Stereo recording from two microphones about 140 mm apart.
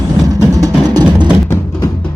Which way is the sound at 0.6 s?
30° right (ahead or behind).